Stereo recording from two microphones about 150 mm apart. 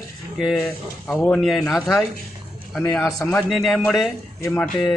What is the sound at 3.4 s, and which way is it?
A man's voice, centre (ahead or behind).